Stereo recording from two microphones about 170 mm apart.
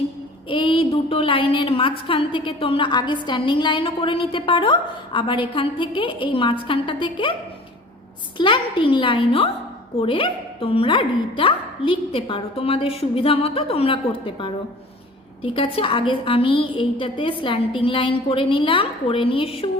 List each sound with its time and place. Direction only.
0.4 s a woman's voice: 30° left (ahead or behind)
8.4 s a woman's voice: 30° left (ahead or behind)